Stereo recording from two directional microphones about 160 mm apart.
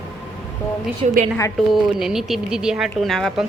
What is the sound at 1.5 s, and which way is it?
Speech, centre (ahead or behind).